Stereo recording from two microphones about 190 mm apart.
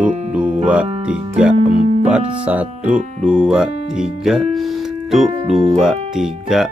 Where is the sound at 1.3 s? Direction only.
5° right (ahead or behind).